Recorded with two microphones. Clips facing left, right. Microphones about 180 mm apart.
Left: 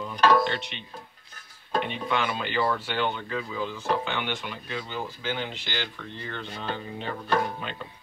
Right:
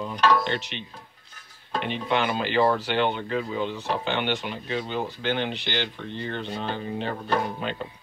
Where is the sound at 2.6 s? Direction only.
40° right (ahead or behind).